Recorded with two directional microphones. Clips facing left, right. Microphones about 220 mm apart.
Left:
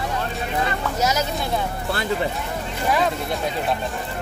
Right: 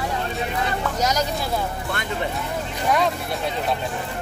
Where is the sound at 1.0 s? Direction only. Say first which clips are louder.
Left 1 dB; 5° left (ahead or behind).